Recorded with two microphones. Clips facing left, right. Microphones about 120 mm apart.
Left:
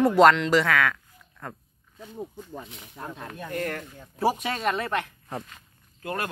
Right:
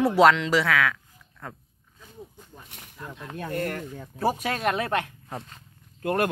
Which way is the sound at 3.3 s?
25° right (ahead or behind).